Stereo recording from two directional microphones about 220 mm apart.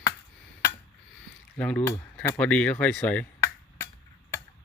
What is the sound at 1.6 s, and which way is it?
Speech, 5° left (ahead or behind).